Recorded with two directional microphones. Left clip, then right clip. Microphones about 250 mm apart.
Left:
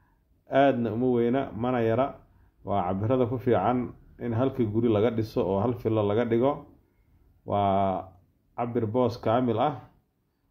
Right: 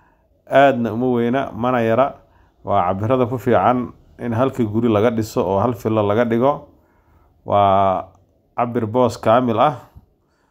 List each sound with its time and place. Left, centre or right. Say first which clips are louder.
0.5 s speech: right 9 dB; centre